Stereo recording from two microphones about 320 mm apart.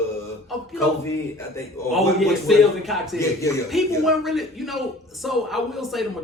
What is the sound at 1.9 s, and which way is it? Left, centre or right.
A man's voice, centre.